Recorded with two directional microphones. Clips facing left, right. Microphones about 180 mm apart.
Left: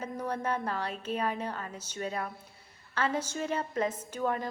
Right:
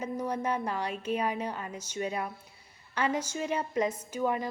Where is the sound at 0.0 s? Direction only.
10° right (ahead or behind).